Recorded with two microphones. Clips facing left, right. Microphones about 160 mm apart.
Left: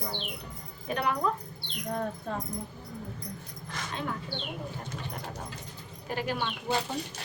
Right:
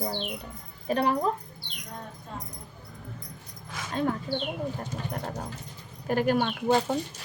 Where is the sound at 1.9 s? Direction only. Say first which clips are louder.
Left 8 dB; 60° left (ahead or behind).